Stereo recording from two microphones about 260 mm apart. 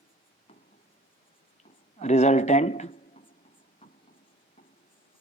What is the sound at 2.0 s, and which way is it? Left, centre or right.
Speech, left.